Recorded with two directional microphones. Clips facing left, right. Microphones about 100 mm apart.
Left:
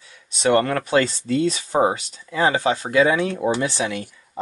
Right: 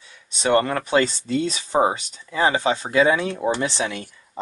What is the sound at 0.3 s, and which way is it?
Speech, 25° right (ahead or behind).